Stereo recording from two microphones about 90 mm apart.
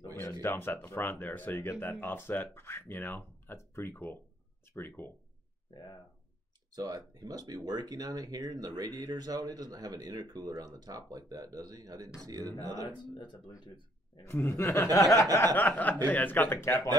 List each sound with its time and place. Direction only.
0.4 s speech: 25° left (ahead or behind)
5.7 s speech: 55° left (ahead or behind)
6.7 s a man's voice: 45° right (ahead or behind)
12.8 s speech: 60° left (ahead or behind)
14.2 s speech: 30° left (ahead or behind)
15.0 s a sound: 40° left (ahead or behind)
15.5 s speech: 15° left (ahead or behind)